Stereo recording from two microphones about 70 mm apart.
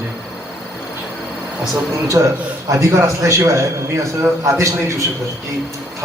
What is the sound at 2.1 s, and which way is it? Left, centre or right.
A man's voice, right.